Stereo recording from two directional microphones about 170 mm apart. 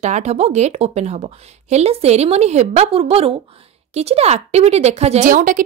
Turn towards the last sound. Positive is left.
turn(degrees=-50)  # may be behind; listen again after turning